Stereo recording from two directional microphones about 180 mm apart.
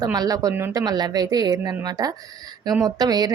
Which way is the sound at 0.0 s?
20° right (ahead or behind).